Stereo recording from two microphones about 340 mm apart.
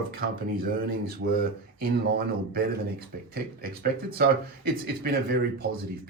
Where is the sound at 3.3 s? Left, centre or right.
Right.